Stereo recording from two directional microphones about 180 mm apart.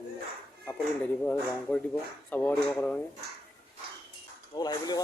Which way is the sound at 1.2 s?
10° left (ahead or behind).